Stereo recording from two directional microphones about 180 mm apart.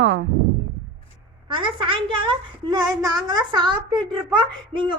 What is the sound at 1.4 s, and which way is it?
A woman's voice, 30° right (ahead or behind).